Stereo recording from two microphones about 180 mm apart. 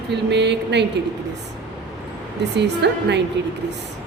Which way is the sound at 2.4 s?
70° right (ahead or behind).